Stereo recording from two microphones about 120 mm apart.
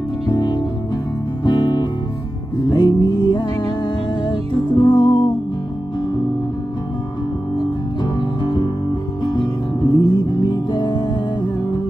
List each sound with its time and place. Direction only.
0.3 s music: 40° left (ahead or behind)
7.5 s music: 35° left (ahead or behind)